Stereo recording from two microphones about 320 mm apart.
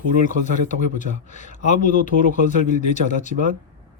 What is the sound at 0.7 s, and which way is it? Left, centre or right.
Speech, left.